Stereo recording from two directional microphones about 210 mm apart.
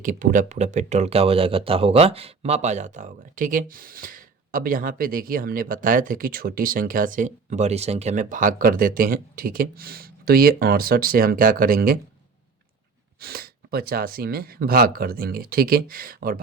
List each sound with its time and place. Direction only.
0.0 s speech: 40° right (ahead or behind)
13.1 s speech: 45° right (ahead or behind)